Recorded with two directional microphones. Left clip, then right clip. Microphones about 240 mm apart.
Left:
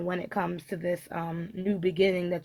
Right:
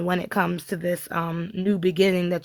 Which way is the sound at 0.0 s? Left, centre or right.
Right.